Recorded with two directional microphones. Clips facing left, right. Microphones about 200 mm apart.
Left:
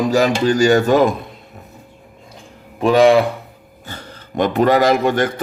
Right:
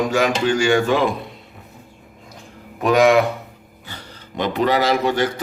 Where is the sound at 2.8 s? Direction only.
30° left (ahead or behind).